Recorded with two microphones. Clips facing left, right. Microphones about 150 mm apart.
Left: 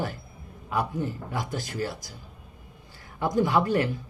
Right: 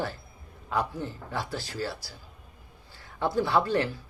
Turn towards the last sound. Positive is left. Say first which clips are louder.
# left 2 dB
turn(degrees=15)  # may be behind; listen again after turning